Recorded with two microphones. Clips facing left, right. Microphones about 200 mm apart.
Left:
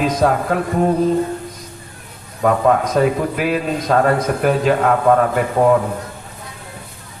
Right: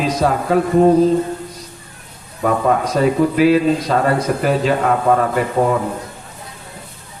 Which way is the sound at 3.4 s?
50° left (ahead or behind).